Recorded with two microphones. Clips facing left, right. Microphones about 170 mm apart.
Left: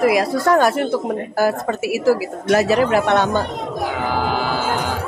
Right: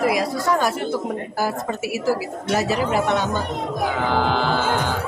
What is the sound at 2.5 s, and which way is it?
Speech, 70° left (ahead or behind).